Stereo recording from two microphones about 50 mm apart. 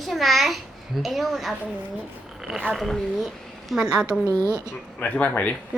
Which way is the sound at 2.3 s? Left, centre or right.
Centre.